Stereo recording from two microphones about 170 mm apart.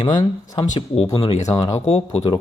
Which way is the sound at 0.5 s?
35° left (ahead or behind).